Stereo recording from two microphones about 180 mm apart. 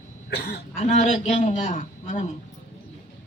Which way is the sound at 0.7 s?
40° left (ahead or behind).